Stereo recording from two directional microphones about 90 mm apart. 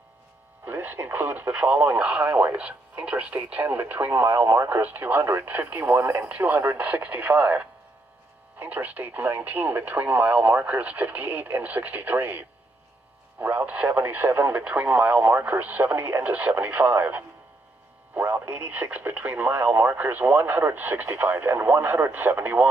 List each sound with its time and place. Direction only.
0.7 s speech: 20° right (ahead or behind)
18.5 s speech: 15° right (ahead or behind)